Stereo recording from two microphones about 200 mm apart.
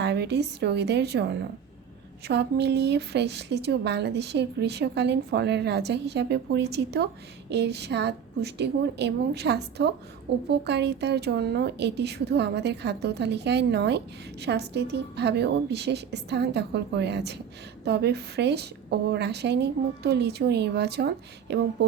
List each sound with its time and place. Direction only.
0.0 s speech: 55° right (ahead or behind)